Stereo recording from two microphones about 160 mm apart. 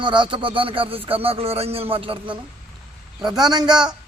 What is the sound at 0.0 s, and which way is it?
A man's voice, 30° right (ahead or behind).